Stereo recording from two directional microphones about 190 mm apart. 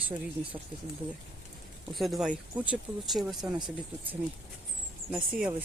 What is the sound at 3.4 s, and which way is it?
Speech, 20° right (ahead or behind).